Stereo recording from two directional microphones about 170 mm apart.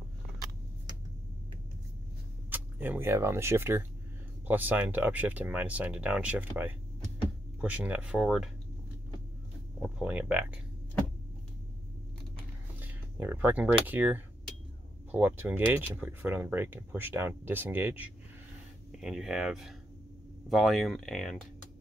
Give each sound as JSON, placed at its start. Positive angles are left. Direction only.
{"t": 2.5, "sound": "speech", "side_deg": -10}
{"t": 9.8, "sound": "speech", "side_deg": -5}
{"t": 12.7, "sound": "speech", "side_deg": -10}